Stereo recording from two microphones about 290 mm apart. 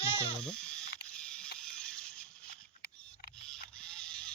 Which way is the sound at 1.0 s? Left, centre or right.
Centre.